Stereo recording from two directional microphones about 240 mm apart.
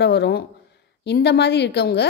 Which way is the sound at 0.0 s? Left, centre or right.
Left.